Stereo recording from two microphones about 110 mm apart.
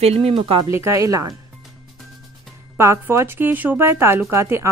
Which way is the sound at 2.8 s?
25° right (ahead or behind).